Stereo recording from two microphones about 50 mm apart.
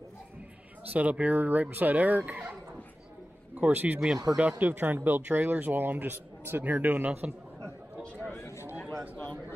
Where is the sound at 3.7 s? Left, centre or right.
Right.